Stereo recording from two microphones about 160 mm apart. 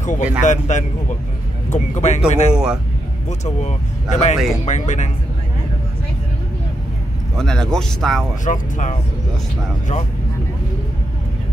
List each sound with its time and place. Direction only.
0.0 s speech: 50° left (ahead or behind)
2.5 s speech: 5° right (ahead or behind)
3.3 s speech: 45° left (ahead or behind)
7.3 s speech: 5° left (ahead or behind)
8.5 s speech: 50° left (ahead or behind)